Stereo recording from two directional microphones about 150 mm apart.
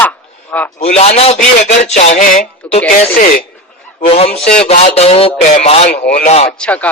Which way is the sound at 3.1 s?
65° left (ahead or behind).